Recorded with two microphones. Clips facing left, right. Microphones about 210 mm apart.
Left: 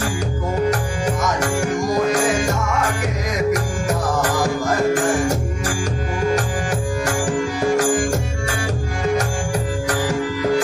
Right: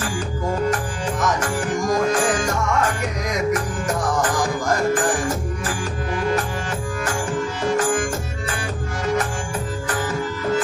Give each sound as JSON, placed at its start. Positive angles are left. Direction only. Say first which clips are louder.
{"t": 7.8, "sound": "music", "louder": "left 3 dB", "side_deg": 75}